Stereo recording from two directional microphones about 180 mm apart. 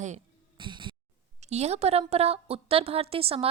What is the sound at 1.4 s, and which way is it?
A woman's voice, 40° right (ahead or behind).